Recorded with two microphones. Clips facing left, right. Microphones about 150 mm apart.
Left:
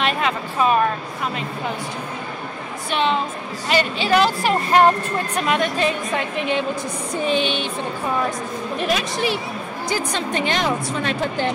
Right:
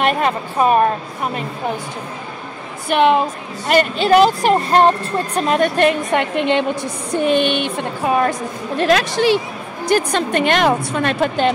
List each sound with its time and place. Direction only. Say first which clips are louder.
0.0 s speech: right 4 dB; 45° right (ahead or behind)
2.9 s a woman's voice: right 7 dB; 55° right (ahead or behind); by 5.6 s 35° right (ahead or behind)
5.6 s a woman's voice: right 6 dB; 65° right (ahead or behind)
7.2 s a woman's voice: right 5 dB; 55° right (ahead or behind)
8.7 s a woman's voice: right 8 dB; 90° right
9.8 s a woman's voice: right 8 dB; 65° right (ahead or behind)